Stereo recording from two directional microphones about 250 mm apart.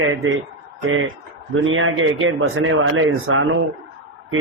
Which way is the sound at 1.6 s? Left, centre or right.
Right.